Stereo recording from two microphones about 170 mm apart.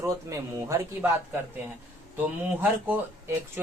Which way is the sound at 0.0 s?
20° right (ahead or behind).